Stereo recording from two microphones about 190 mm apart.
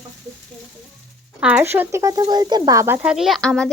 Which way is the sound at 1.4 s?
5° right (ahead or behind).